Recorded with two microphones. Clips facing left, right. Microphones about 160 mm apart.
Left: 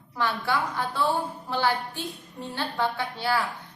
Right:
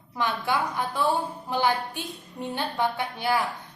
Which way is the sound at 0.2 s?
15° right (ahead or behind).